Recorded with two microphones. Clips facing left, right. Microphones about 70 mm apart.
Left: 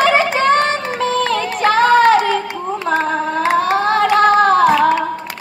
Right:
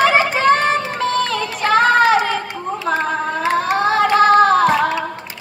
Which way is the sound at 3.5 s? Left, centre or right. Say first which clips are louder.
Left 1 dB; centre.